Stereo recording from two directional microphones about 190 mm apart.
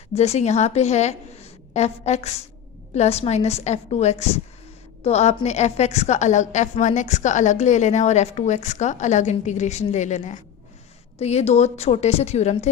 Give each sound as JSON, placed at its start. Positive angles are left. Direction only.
{"t": 0.1, "sound": "a woman's voice", "side_deg": 35}